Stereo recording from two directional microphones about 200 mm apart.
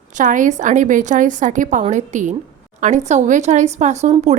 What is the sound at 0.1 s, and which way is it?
A woman's voice, 40° right (ahead or behind).